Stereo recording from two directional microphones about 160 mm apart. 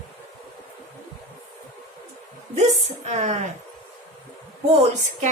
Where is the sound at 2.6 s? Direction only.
45° right (ahead or behind).